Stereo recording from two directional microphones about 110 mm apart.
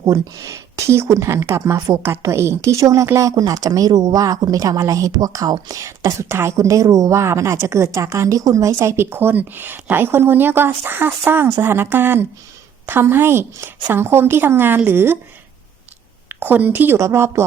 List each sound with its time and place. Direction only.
0.0 s speech: 30° right (ahead or behind)
16.3 s speech: 15° right (ahead or behind)